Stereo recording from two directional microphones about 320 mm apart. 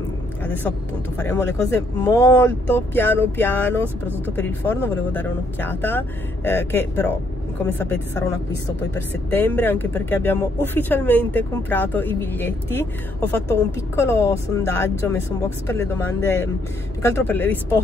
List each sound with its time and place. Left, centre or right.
0.5 s speech: centre